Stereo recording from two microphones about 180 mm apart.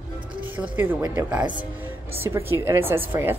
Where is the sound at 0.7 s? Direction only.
10° right (ahead or behind).